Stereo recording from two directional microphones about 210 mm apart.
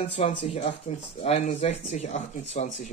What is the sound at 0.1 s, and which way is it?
Speech, 30° left (ahead or behind).